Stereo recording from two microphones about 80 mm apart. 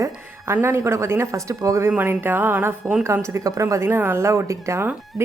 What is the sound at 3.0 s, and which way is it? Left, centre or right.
Speech, right.